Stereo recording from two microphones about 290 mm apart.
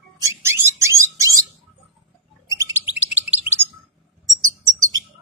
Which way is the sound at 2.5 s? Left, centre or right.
Centre.